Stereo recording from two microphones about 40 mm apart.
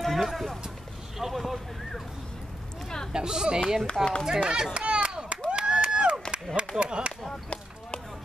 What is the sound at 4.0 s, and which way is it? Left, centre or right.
Speech, centre.